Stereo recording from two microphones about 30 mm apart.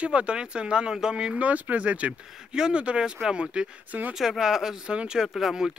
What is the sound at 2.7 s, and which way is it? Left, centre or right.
Speech, right.